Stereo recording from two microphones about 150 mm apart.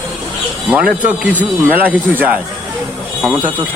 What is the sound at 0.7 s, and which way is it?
Speech, 10° right (ahead or behind).